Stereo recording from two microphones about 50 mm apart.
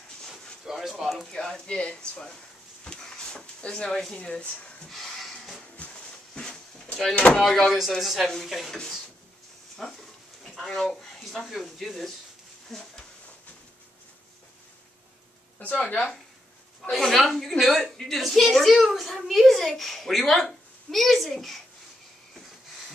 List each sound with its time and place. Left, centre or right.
0.7 s speech: centre
1.3 s speech: centre
2.8 s a sound: centre
4.1 s speech: left
4.8 s a sound: centre
5.8 s a sound: centre
7.2 s speech: left
7.4 s a child's voice: centre
9.8 s a child's voice: centre
16.9 s a child's voice: centre
17.8 s a woman's voice: centre
18.1 s a child's voice: centre